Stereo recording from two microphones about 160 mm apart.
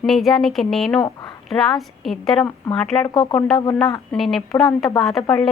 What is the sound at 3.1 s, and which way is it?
Speech, 30° left (ahead or behind).